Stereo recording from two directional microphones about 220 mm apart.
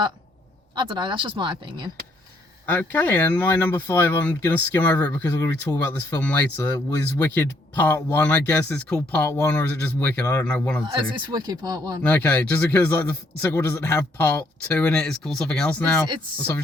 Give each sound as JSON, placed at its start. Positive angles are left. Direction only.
{"t": 0.8, "sound": "speech", "side_deg": -20}
{"t": 2.6, "sound": "speech", "side_deg": 10}
{"t": 11.3, "sound": "speech", "side_deg": -15}
{"t": 12.0, "sound": "speech", "side_deg": 10}